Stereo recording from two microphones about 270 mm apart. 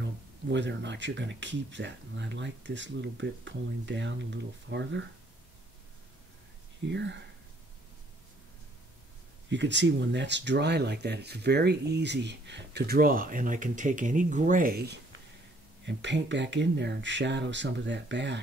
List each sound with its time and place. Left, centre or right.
0.0 s speech: right
6.9 s speech: right
9.5 s speech: right